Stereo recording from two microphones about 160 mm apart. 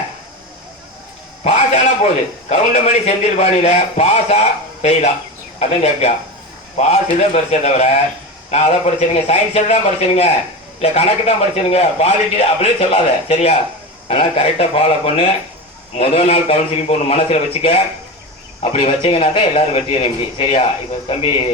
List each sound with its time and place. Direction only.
1.5 s a sound: 45° left (ahead or behind)
2.5 s a man's voice: 40° left (ahead or behind)
10.8 s a man's voice: 40° left (ahead or behind)